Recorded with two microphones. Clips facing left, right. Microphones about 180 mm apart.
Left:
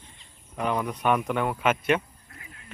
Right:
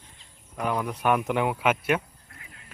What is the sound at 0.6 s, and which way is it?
Speech, 5° right (ahead or behind).